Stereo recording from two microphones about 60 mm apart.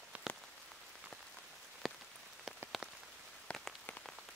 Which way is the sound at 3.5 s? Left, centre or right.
Centre.